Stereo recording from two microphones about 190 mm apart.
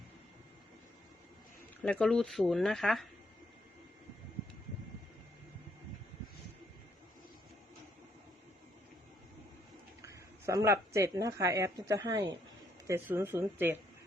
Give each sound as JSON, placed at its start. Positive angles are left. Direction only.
{"t": 1.8, "sound": "speech", "side_deg": 5}
{"t": 10.0, "sound": "speech", "side_deg": -15}